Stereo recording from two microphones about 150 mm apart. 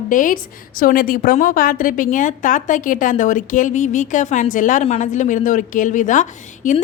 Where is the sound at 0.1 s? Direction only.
60° left (ahead or behind).